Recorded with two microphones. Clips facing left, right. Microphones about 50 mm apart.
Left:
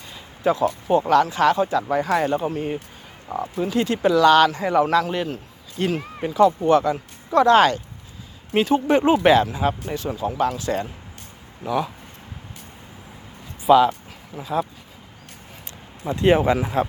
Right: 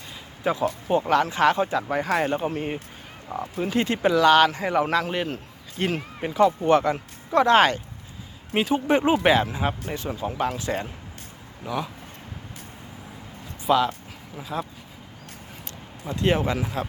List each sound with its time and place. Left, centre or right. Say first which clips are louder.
0.4 s speech: left 4 dB; centre
6.7 s speech: left 2 dB; right
8.5 s speech: left 3 dB; centre
11.6 s speech: left 6 dB; centre
13.7 s speech: left 6 dB; centre
16.0 s speech: left 6 dB; left